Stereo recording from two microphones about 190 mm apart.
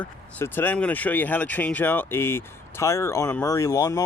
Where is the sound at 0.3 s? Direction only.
10° left (ahead or behind).